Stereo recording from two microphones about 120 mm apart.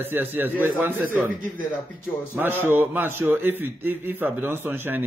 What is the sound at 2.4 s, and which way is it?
A man's voice, 20° right (ahead or behind).